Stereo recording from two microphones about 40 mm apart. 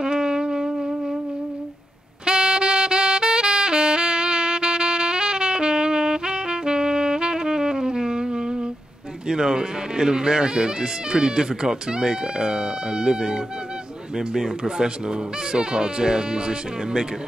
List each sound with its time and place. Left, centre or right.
0.0 s music: centre
2.2 s saxophone: centre
9.3 s speech: centre